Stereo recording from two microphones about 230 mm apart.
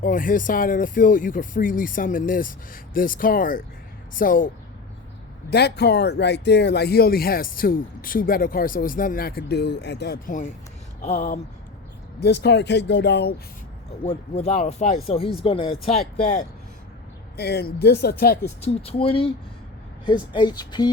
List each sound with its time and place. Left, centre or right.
0.0 s speech: left
12.2 s speech: left
14.0 s speech: left
17.3 s speech: left
18.6 s speech: left